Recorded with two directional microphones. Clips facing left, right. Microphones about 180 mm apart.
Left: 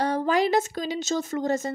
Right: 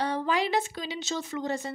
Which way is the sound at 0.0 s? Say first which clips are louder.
Left 5 dB; 45° left (ahead or behind).